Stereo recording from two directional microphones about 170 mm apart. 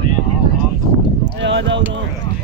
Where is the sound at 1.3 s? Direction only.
90° right.